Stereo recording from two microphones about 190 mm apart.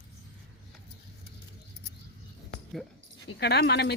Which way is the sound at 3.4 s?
60° left (ahead or behind).